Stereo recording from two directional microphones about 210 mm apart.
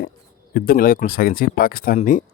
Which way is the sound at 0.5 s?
45° left (ahead or behind).